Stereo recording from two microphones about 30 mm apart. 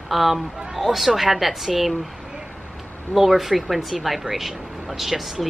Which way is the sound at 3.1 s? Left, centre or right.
Centre.